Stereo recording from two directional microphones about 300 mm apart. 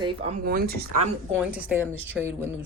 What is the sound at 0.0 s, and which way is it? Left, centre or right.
Speech, centre.